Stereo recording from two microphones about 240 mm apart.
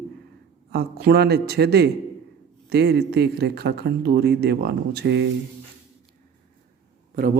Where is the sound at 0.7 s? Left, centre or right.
Right.